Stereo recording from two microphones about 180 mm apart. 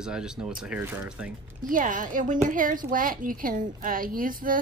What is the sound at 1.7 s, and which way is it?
A woman's voice, 45° right (ahead or behind).